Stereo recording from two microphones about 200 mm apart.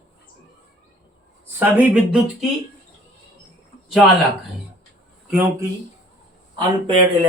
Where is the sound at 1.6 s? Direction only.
5° right (ahead or behind).